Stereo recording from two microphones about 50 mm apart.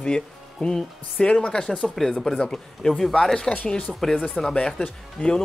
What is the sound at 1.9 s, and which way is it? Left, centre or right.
Speech, centre.